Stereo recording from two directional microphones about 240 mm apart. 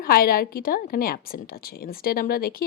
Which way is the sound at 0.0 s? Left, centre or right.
Left.